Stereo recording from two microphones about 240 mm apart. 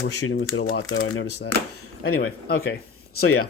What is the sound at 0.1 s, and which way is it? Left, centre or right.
Speech, left.